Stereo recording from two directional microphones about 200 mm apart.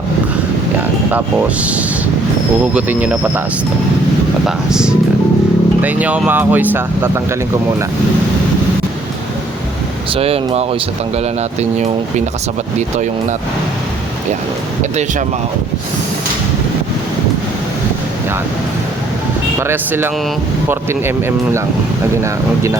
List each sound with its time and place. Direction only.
1.1 s speech: 5° right (ahead or behind)
4.4 s speech: 5° right (ahead or behind)
10.2 s speech: 30° right (ahead or behind)
19.5 s speech: 10° right (ahead or behind)